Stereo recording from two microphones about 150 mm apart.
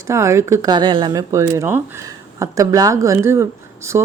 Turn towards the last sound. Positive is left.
turn(degrees=-20)  # may be behind; listen again after turning